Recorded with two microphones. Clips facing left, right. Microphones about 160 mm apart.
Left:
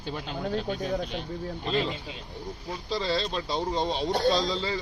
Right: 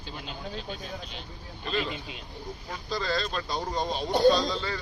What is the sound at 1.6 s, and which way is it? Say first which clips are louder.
Speech: left 1 dB; 25° left (ahead or behind).